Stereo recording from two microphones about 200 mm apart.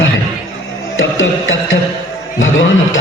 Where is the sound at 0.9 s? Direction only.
75° left (ahead or behind).